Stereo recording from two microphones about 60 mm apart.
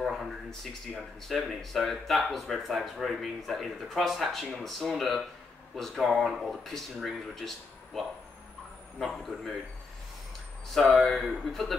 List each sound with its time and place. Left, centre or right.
0.0 s speech: centre
10.7 s speech: centre